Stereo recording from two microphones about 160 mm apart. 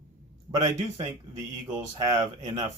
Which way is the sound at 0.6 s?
20° right (ahead or behind).